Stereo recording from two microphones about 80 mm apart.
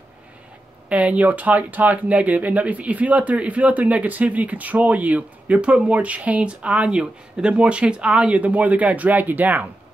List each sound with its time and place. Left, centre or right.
0.8 s speech: centre